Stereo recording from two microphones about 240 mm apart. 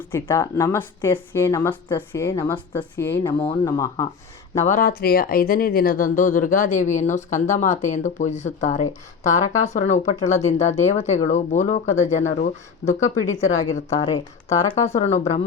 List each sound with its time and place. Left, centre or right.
0.1 s speech: centre
4.6 s speech: left
14.1 s speech: centre
14.9 s speech: left